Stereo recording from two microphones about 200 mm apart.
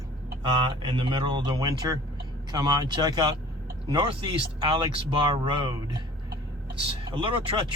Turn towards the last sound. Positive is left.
turn(degrees=-25)  # may be behind; listen again after turning